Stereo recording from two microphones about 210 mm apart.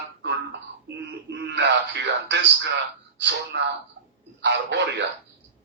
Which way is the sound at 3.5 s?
55° right (ahead or behind).